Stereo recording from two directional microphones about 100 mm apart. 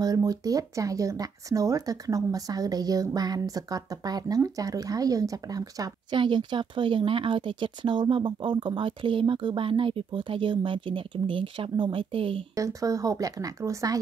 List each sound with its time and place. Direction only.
0.0 s speech: 40° right (ahead or behind)
6.1 s speech: 55° right (ahead or behind)
12.5 s speech: 35° right (ahead or behind)